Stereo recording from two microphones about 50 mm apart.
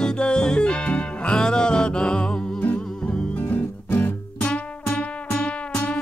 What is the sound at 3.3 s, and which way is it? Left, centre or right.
Music, left.